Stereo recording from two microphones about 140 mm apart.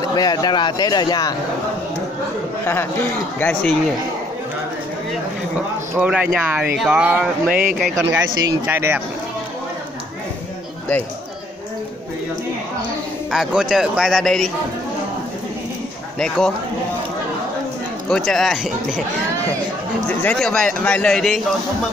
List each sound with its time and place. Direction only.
0.1 s speech: 30° left (ahead or behind)
2.6 s a man's voice: 15° left (ahead or behind)
5.9 s speech: 10° right (ahead or behind)
13.3 s speech: 5° right (ahead or behind)
16.2 s speech: 5° left (ahead or behind)
18.1 s speech: centre (ahead or behind)
20.1 s a man's voice: 5° left (ahead or behind)